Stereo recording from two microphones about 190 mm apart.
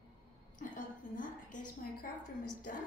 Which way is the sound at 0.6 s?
45° left (ahead or behind).